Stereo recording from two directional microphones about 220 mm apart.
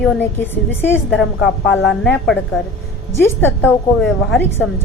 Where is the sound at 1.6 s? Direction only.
55° left (ahead or behind).